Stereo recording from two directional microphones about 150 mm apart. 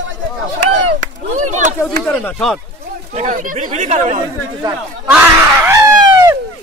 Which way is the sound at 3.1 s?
55° right (ahead or behind).